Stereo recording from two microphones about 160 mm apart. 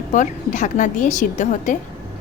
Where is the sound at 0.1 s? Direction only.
50° left (ahead or behind).